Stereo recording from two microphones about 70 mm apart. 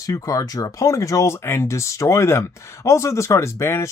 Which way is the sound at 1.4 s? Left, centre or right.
Left.